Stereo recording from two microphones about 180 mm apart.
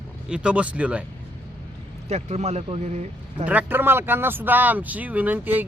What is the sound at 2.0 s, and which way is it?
Speech, 40° right (ahead or behind).